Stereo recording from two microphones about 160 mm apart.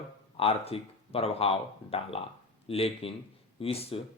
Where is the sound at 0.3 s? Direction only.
35° left (ahead or behind).